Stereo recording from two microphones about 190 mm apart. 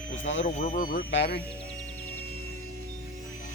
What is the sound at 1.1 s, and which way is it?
Speech, 70° left (ahead or behind).